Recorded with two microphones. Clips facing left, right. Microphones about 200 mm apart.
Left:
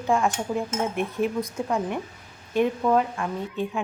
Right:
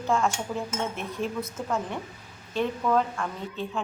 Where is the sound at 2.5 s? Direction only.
15° left (ahead or behind).